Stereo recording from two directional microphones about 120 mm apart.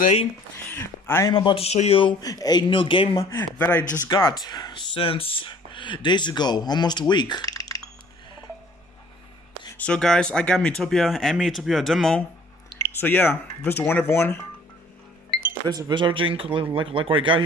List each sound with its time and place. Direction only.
0.7 s speech: 20° left (ahead or behind)
1.3 s speech: 45° left (ahead or behind)
2.2 s speech: 30° left (ahead or behind)
3.2 s speech: 20° left (ahead or behind)
4.1 s speech: 40° left (ahead or behind)
9.8 s speech: 10° left (ahead or behind)
13.0 s speech: 15° left (ahead or behind)
15.6 s speech: 40° right (ahead or behind)